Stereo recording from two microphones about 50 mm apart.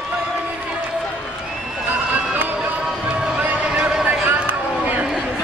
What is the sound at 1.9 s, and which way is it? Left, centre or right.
Run, right.